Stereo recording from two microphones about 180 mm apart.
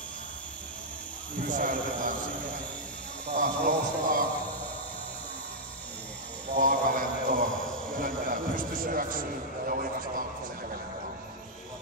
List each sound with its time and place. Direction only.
1.4 s a man's voice: 50° right (ahead or behind)
3.3 s a man's voice: 50° right (ahead or behind)
6.5 s a sound: 50° right (ahead or behind)